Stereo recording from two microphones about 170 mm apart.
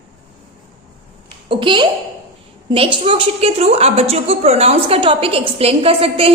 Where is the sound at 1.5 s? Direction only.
30° right (ahead or behind).